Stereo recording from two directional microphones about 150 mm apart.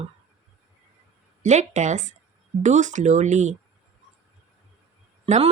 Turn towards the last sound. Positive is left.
turn(degrees=-50)  # may be behind; listen again after turning